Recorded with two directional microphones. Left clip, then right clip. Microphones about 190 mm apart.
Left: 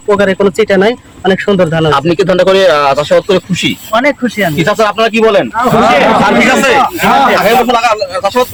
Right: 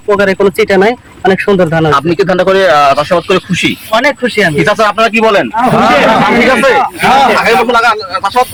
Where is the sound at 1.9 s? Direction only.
30° left (ahead or behind).